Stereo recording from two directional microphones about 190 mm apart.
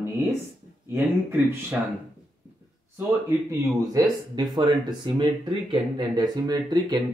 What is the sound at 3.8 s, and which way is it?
Speech, 20° right (ahead or behind).